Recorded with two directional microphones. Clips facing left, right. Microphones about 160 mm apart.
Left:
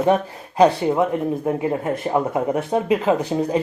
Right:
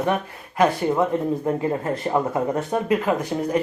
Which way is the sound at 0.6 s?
15° left (ahead or behind).